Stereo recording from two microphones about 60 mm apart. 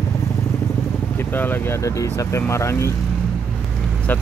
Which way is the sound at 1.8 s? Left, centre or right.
Left.